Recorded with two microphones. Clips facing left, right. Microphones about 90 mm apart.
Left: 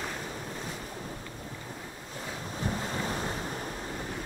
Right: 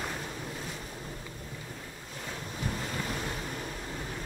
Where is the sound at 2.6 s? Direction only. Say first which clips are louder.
Left 3 dB; 35° left (ahead or behind).